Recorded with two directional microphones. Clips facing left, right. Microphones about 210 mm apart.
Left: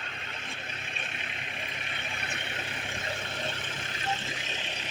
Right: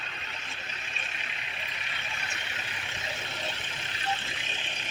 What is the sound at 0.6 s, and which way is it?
Vehicle, 55° left (ahead or behind).